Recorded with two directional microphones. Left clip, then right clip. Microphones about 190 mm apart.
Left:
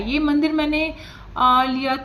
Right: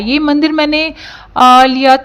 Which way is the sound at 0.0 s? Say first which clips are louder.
Right 8 dB; 45° right (ahead or behind).